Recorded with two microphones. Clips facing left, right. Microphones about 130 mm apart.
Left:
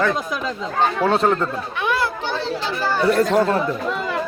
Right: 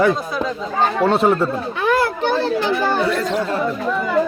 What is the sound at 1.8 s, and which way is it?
Children playing, 50° right (ahead or behind).